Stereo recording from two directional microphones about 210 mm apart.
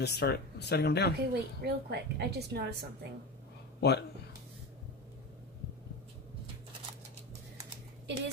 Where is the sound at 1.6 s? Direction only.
50° right (ahead or behind).